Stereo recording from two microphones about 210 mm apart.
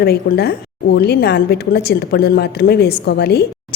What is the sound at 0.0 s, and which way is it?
A woman's voice, 50° left (ahead or behind).